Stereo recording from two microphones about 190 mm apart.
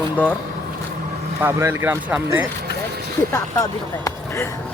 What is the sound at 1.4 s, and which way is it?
Speech, 10° right (ahead or behind).